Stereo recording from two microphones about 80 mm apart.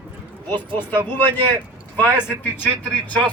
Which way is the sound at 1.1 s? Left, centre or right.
Left.